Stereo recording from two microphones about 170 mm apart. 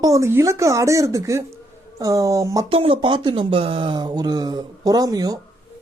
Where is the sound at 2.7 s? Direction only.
30° right (ahead or behind).